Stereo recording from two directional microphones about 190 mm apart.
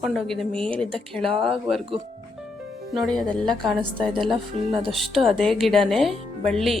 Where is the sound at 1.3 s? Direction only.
30° right (ahead or behind).